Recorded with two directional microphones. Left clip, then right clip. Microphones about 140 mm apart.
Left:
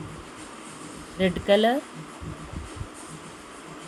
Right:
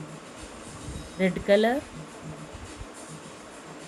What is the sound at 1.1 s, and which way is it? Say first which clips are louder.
Speech: left 1 dB; centre (ahead or behind).